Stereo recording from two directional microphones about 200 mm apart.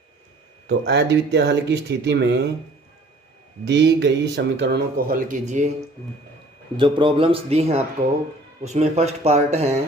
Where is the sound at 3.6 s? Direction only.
60° right (ahead or behind); by 5.7 s 35° right (ahead or behind).